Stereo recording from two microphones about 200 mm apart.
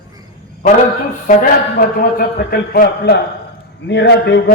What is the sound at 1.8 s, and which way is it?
A man's voice, 50° left (ahead or behind).